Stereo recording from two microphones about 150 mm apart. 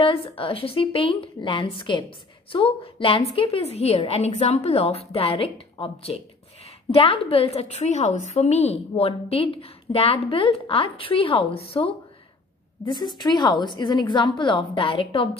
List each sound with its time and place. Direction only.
0.0 s a woman's voice: 40° left (ahead or behind)